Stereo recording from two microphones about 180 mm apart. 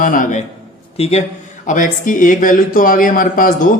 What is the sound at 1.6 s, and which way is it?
Speech, 45° left (ahead or behind).